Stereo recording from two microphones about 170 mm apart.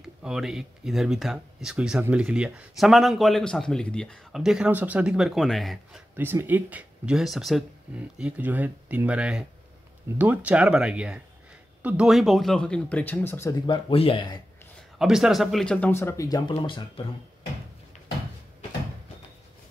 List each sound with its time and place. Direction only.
0.0 s speech: 5° right (ahead or behind)
6.1 s speech: 10° right (ahead or behind); by 13.6 s 15° left (ahead or behind)
13.7 s speech: 30° left (ahead or behind)
15.0 s speech: 5° right (ahead or behind); by 17.0 s 30° left (ahead or behind)